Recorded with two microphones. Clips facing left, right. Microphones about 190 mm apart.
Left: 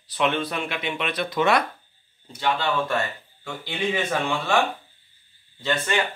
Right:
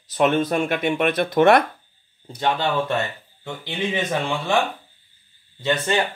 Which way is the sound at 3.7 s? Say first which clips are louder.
Right 1 dB; 15° right (ahead or behind).